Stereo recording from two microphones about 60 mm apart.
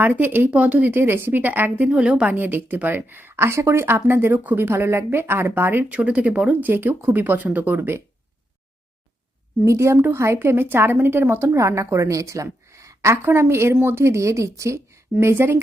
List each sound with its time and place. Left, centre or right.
0.0 s a woman's voice: right
0.5 s speech: right
0.9 s a woman's voice: right
1.9 s a woman's voice: centre
2.3 s a woman's voice: right
5.9 s speech: centre
6.7 s a woman's voice: right
9.6 s a woman's voice: right
11.5 s a woman's voice: right
13.2 s a woman's voice: right
15.2 s a woman's voice: right